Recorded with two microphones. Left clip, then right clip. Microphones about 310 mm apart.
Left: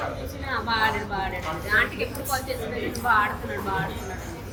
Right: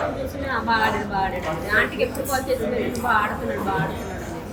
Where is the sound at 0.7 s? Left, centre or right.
Centre.